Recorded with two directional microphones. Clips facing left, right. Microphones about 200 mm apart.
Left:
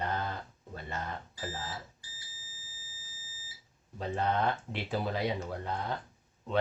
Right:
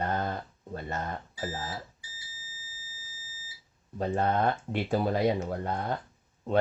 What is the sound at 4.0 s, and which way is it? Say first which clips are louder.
Speech: right 4 dB; 45° right (ahead or behind).